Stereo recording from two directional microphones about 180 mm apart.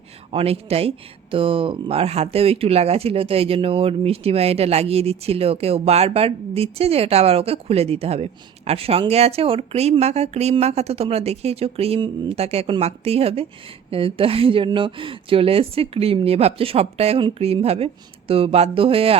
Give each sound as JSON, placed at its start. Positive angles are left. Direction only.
{"t": 0.3, "sound": "speech", "side_deg": -35}